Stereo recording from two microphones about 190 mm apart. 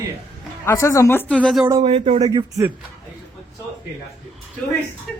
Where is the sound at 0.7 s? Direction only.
15° left (ahead or behind).